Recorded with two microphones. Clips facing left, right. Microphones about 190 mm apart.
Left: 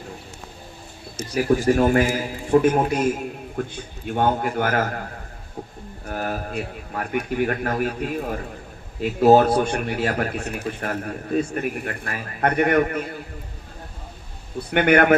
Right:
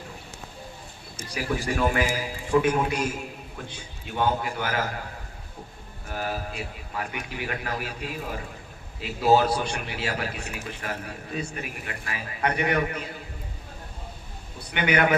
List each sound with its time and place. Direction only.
1.3 s a man's voice: 40° left (ahead or behind)
3.6 s a man's voice: 50° left (ahead or behind)
6.1 s a man's voice: 50° left (ahead or behind)
14.7 s a man's voice: 50° left (ahead or behind)